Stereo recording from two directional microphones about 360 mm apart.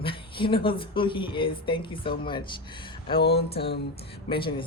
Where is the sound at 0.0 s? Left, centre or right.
Centre.